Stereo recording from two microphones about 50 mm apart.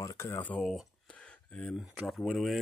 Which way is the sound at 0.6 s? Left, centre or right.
Centre.